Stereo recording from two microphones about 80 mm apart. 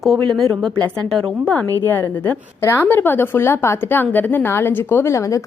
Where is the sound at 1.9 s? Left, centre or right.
Left.